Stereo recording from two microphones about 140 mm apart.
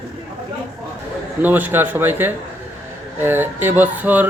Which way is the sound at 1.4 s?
15° right (ahead or behind).